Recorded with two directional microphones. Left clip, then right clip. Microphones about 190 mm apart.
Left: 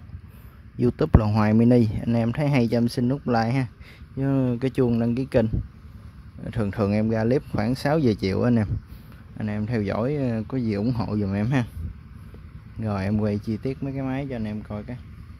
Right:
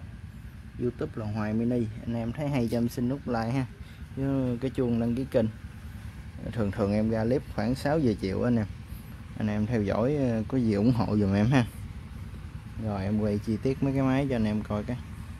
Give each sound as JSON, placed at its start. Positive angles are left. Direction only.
{"t": 0.7, "sound": "speech", "side_deg": 35}
{"t": 12.8, "sound": "speech", "side_deg": 30}